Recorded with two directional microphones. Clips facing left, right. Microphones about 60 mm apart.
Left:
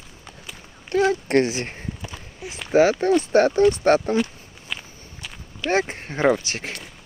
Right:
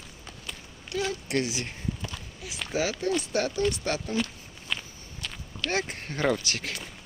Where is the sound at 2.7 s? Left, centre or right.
Left.